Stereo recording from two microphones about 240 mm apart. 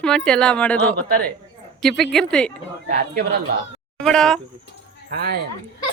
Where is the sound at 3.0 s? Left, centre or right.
Right.